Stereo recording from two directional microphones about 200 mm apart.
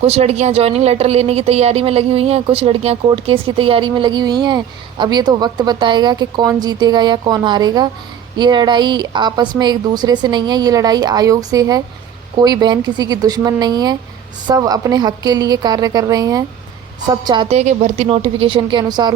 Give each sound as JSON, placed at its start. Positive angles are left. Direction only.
{"t": 0.0, "sound": "a woman's voice", "side_deg": -30}
{"t": 17.6, "sound": "a woman's voice", "side_deg": -35}